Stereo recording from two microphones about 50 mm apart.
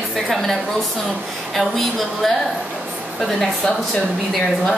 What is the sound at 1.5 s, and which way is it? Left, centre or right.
Speech, centre.